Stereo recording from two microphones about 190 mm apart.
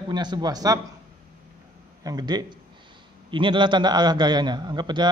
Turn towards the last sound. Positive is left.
turn(degrees=-25)  # may be behind; listen again after turning